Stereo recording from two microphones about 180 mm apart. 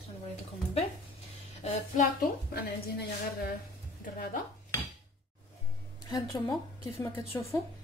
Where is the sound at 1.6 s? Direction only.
45° left (ahead or behind); by 3.5 s 60° left (ahead or behind).